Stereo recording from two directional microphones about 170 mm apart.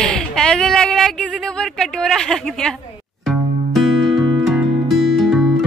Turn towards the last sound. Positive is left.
turn(degrees=0)  # may be behind; listen again after turning